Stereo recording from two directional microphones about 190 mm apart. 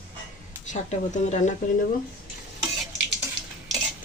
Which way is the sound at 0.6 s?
40° left (ahead or behind).